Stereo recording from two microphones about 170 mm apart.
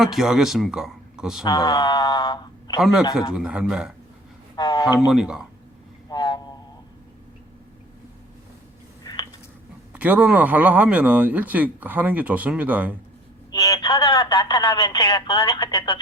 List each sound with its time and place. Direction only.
0.0 s speech: centre (ahead or behind)
1.5 s speech: 25° left (ahead or behind)
3.3 s speech: 5° right (ahead or behind)
4.5 s speech: 25° left (ahead or behind)
4.9 s speech: centre (ahead or behind)
6.1 s a sound: 25° left (ahead or behind)
9.0 s a sound: 25° left (ahead or behind)
9.9 s speech: 10° right (ahead or behind)
13.5 s speech: 20° left (ahead or behind)